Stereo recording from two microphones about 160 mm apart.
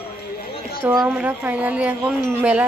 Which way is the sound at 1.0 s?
5° right (ahead or behind).